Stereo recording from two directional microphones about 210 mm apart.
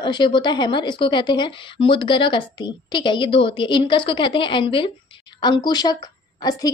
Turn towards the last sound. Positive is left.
turn(degrees=20)  # may be behind; listen again after turning